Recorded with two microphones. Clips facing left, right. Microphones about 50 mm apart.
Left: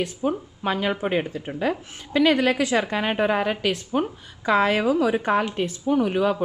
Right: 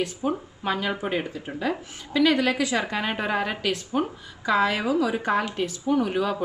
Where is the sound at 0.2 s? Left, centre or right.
Centre.